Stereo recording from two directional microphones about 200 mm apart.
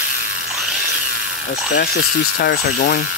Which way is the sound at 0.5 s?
Centre (ahead or behind).